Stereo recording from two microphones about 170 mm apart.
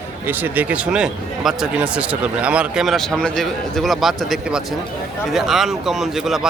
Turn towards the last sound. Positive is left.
turn(degrees=0)  # may be behind; listen again after turning